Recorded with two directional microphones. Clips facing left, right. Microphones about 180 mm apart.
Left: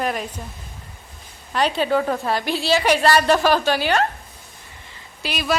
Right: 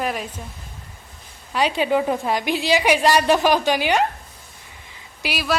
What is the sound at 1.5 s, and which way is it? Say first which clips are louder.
A woman's voice: even; 10° right (ahead or behind).